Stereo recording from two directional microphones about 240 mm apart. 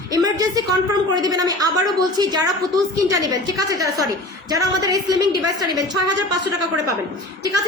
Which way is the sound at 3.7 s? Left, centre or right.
Centre.